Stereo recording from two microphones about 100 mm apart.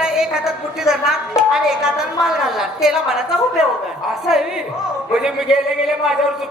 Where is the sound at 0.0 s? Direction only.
5° right (ahead or behind).